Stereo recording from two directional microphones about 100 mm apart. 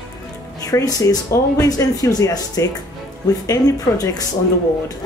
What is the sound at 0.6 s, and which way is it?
Speech, 35° left (ahead or behind).